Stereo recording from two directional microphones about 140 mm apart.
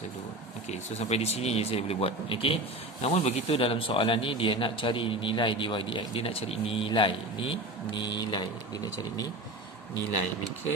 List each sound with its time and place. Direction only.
0.7 s speech: 50° left (ahead or behind); by 8.9 s 30° left (ahead or behind)